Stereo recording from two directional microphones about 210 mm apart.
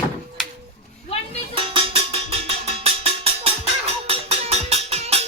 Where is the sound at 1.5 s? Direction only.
25° right (ahead or behind).